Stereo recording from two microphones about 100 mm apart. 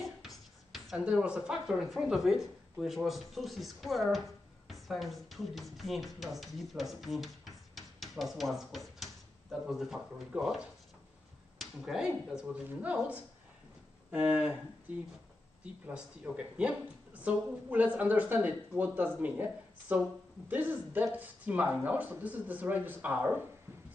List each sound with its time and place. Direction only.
0.0 s beatboxing: centre (ahead or behind)
0.9 s speech: 10° right (ahead or behind)
6.1 s music: centre (ahead or behind)
11.5 s finger snapping: centre (ahead or behind)
12.6 s a woman's voice: 15° right (ahead or behind)
15.6 s a woman's voice: 10° right (ahead or behind)